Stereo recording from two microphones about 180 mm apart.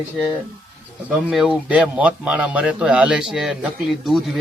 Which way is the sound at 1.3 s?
Centre (ahead or behind).